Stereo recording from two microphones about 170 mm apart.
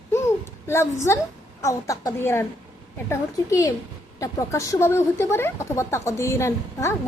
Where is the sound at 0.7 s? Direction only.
15° left (ahead or behind).